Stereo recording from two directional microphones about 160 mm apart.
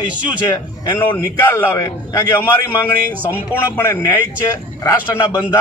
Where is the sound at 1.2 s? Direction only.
20° left (ahead or behind).